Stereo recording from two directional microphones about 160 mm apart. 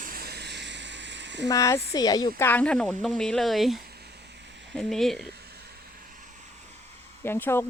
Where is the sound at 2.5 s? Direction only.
10° left (ahead or behind).